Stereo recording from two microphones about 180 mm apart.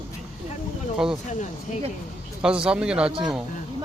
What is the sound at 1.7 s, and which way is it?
Speech, 40° left (ahead or behind).